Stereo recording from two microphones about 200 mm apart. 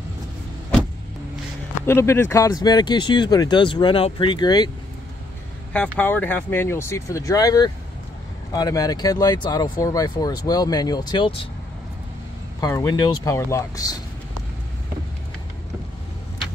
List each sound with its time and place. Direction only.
1.9 s speech: 10° left (ahead or behind)
5.7 s speech: 5° left (ahead or behind); by 11.4 s 25° left (ahead or behind)
12.5 s speech: 20° left (ahead or behind)